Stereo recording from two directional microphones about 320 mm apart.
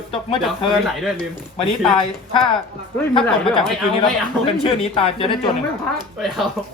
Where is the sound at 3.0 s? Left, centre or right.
Centre.